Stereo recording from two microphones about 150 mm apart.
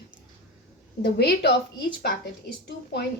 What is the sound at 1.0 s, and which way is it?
Speech, 90° left.